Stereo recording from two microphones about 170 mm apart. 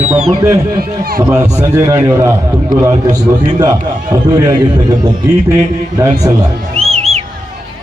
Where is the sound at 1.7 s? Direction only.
20° right (ahead or behind).